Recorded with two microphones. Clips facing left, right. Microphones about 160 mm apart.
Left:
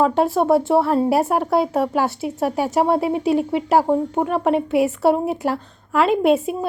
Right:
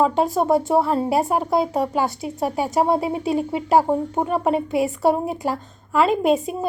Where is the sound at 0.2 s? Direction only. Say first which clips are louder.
Left 2 dB; centre (ahead or behind).